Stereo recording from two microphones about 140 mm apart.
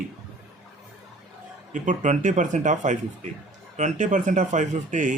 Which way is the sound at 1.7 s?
65° right (ahead or behind).